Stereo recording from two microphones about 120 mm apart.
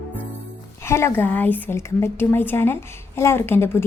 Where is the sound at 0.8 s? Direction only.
20° left (ahead or behind).